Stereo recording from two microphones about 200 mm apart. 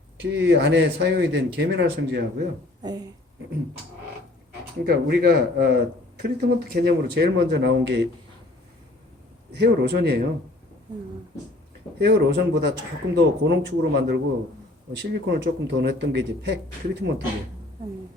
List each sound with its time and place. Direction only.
0.2 s speech: 60° right (ahead or behind)
2.8 s speech: 20° right (ahead or behind)
4.8 s speech: 55° right (ahead or behind)
9.5 s speech: 55° right (ahead or behind)
11.9 s speech: 55° right (ahead or behind)